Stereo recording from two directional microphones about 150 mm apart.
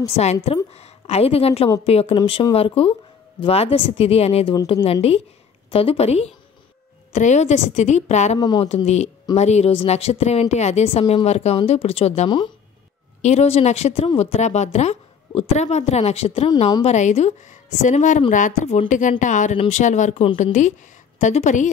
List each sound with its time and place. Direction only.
0.0 s a woman's voice: 45° left (ahead or behind)
5.7 s speech: 40° left (ahead or behind)
8.4 s speech: 30° left (ahead or behind)
8.6 s speech: 45° left (ahead or behind)
13.2 s speech: 45° left (ahead or behind)